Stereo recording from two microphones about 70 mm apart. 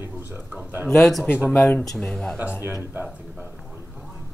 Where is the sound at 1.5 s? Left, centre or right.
Left.